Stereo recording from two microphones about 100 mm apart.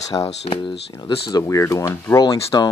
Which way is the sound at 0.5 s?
55° left (ahead or behind).